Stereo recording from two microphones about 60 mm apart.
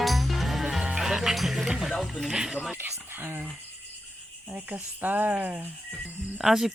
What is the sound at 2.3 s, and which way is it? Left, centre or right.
Speech, centre.